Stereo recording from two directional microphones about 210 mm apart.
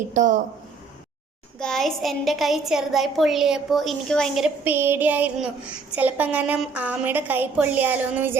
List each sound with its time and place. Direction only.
0.1 s speech: 35° right (ahead or behind)
1.5 s a woman's voice: 5° left (ahead or behind)